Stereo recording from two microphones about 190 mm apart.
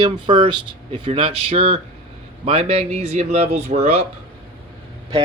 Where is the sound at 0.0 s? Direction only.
25° right (ahead or behind).